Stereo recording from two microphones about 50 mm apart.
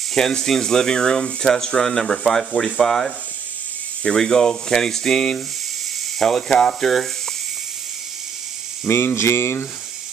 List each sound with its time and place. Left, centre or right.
0.1 s speech: centre
8.8 s speech: left